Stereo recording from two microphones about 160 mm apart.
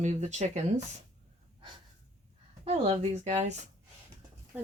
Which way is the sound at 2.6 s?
40° right (ahead or behind).